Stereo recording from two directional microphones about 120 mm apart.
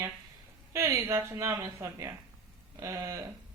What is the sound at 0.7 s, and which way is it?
A man's voice, 25° right (ahead or behind).